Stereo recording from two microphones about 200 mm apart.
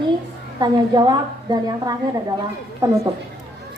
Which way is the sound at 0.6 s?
20° right (ahead or behind).